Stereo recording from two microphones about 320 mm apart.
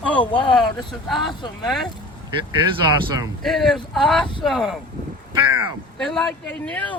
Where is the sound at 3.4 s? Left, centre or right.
Centre.